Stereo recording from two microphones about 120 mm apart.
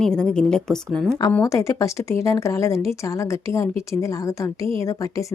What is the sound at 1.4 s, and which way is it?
A woman's voice, 25° left (ahead or behind).